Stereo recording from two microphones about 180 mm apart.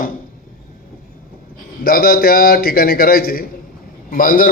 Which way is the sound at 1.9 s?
55° left (ahead or behind).